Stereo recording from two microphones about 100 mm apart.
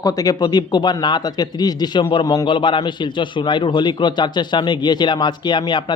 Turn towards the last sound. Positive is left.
turn(degrees=50)  # may be behind; listen again after turning